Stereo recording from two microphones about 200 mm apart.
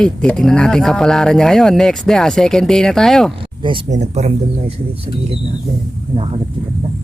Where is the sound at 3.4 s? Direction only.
25° right (ahead or behind).